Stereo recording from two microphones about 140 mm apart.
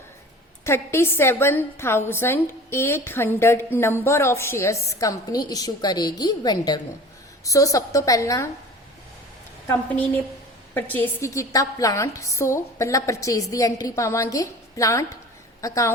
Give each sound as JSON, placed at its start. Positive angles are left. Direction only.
{"t": 0.6, "sound": "a woman's voice", "side_deg": 20}
{"t": 10.8, "sound": "a woman's voice", "side_deg": 10}